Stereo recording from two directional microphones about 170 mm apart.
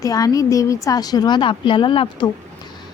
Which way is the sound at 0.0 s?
20° left (ahead or behind).